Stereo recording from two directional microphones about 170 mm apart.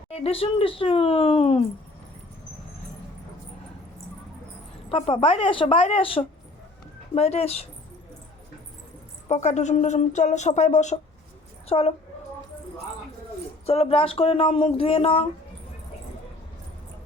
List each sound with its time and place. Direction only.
0.1 s speech: 35° left (ahead or behind)
4.9 s speech: 35° left (ahead or behind)
9.3 s speech: 45° left (ahead or behind)
13.7 s speech: 35° left (ahead or behind)